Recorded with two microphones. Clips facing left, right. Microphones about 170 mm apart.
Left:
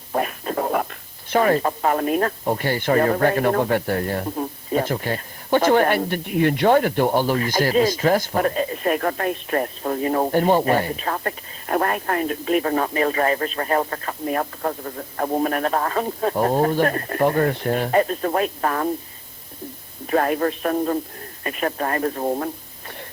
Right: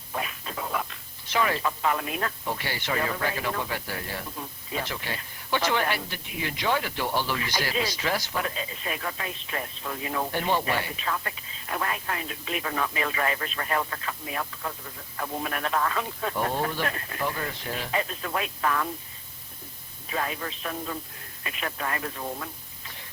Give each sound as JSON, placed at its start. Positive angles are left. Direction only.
{"t": 0.1, "sound": "speech", "side_deg": 50}
{"t": 20.1, "sound": "speech", "side_deg": 55}